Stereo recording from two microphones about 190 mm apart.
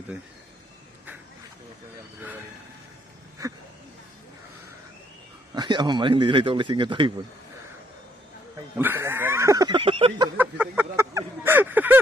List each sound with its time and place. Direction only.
5.5 s speech: 25° right (ahead or behind)
8.8 s snicker: 10° right (ahead or behind); by 10.2 s 30° right (ahead or behind)
10.3 s a sound: 10° right (ahead or behind)